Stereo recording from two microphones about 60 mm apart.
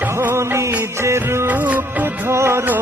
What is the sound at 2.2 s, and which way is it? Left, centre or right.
Music, right.